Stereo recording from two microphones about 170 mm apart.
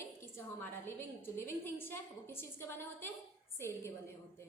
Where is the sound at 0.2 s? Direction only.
15° left (ahead or behind).